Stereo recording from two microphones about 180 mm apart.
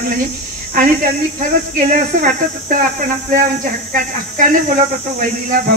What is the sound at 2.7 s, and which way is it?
Speech, 50° right (ahead or behind).